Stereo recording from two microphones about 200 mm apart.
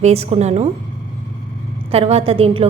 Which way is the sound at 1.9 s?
30° right (ahead or behind).